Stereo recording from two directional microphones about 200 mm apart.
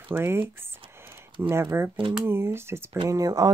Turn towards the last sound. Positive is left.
turn(degrees=-20)  # may be behind; listen again after turning